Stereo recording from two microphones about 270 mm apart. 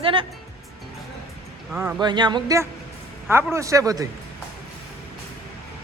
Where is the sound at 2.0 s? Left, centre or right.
Centre.